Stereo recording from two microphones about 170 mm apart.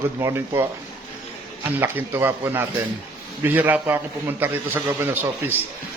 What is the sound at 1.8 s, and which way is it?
A man's voice, 10° right (ahead or behind).